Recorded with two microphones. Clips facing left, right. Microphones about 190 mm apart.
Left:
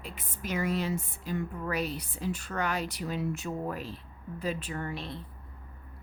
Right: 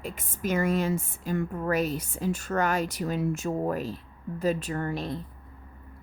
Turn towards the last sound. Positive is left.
turn(degrees=-40)  # may be behind; listen again after turning